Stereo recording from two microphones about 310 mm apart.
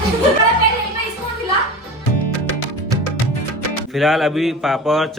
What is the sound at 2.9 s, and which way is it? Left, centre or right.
Music, centre.